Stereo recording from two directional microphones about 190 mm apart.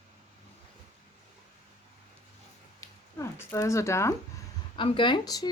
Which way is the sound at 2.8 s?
15° left (ahead or behind).